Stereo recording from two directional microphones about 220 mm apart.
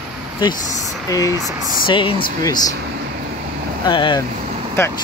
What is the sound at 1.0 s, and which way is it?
Speech, 15° left (ahead or behind).